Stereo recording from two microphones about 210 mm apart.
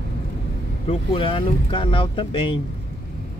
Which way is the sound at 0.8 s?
25° left (ahead or behind).